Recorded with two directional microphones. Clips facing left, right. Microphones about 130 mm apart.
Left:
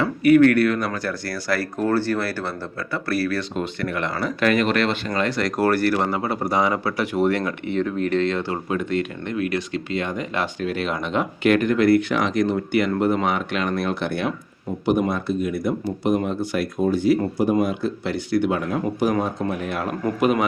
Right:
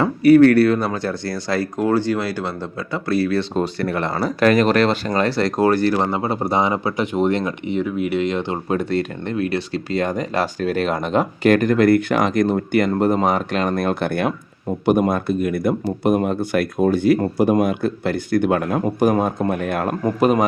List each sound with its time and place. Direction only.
0.0 s speech: 35° right (ahead or behind)
3.5 s speech: 35° right (ahead or behind); by 8.5 s 15° right (ahead or behind)
8.7 s speech: 35° right (ahead or behind); by 19.9 s 50° right (ahead or behind)
20.1 s speech: 35° right (ahead or behind)